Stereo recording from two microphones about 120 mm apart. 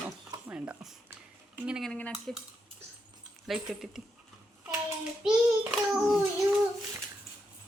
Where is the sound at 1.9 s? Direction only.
10° left (ahead or behind).